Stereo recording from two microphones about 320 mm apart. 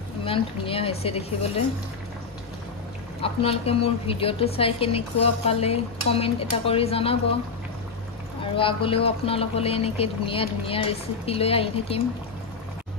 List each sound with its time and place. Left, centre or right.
0.2 s a woman's voice: centre
3.2 s a woman's voice: centre
8.5 s a woman's voice: centre